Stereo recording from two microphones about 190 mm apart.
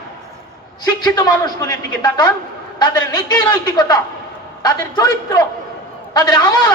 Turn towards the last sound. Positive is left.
turn(degrees=20)  # may be behind; listen again after turning